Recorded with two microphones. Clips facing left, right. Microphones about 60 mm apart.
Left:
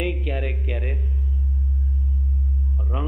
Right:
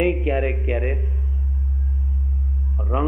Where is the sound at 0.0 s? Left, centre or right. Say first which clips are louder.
Right 7 dB; right.